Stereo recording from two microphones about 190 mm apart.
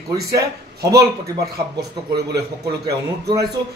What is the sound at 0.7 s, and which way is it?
Speech, 15° right (ahead or behind).